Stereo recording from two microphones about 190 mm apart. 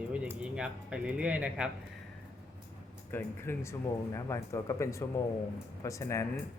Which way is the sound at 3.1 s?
10° left (ahead or behind).